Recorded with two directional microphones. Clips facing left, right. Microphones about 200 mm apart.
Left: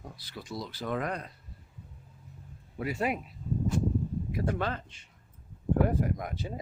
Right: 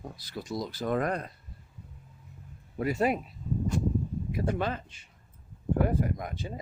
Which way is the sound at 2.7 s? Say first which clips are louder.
Right 4 dB; 45° right (ahead or behind).